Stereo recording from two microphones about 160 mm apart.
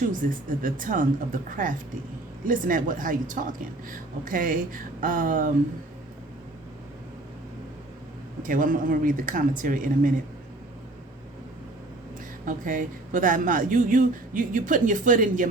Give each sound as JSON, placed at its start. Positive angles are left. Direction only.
{"t": 0.1, "sound": "a woman's voice", "side_deg": -55}
{"t": 8.4, "sound": "a woman's voice", "side_deg": -55}
{"t": 12.5, "sound": "a woman's voice", "side_deg": -55}